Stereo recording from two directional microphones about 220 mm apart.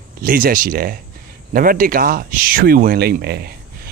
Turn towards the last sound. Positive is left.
turn(degrees=-50)  # may be behind; listen again after turning